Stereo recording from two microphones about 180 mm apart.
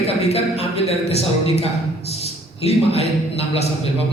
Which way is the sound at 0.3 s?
35° left (ahead or behind).